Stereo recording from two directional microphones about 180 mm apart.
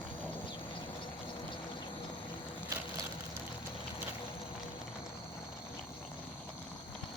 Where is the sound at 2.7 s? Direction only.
20° right (ahead or behind).